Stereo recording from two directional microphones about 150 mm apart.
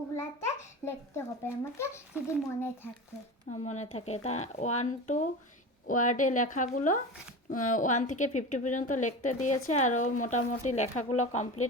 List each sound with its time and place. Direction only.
0.2 s a child's voice: 15° left (ahead or behind)
3.5 s a woman's voice: 50° left (ahead or behind)